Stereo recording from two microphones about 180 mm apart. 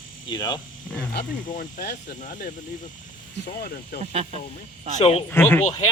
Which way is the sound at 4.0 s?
35° right (ahead or behind).